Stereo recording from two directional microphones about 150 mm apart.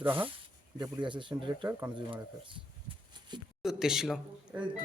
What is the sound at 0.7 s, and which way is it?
Speech, 25° right (ahead or behind).